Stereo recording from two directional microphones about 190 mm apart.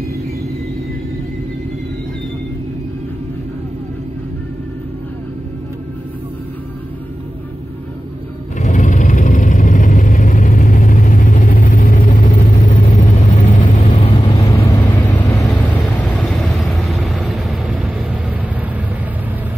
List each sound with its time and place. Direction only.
8.5 s vehicle: 40° left (ahead or behind)
13.7 s vehicle: 25° left (ahead or behind); by 17.1 s 5° left (ahead or behind)
17.1 s vehicle: 5° right (ahead or behind)